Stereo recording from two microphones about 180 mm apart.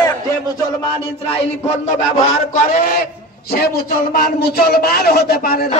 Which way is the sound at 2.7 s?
55° left (ahead or behind).